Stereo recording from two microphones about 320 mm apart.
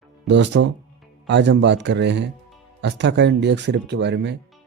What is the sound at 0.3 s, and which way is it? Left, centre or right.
Speech, right.